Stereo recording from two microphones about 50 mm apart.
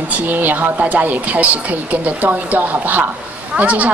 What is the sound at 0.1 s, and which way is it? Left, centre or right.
A woman's voice, right.